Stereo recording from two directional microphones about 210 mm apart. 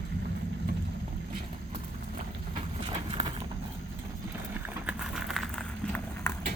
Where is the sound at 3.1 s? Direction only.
25° right (ahead or behind).